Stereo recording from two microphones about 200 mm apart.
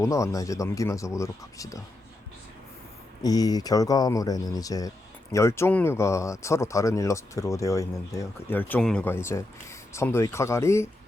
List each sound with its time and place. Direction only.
0.0 s speech: 15° left (ahead or behind)
3.2 s speech: 20° left (ahead or behind)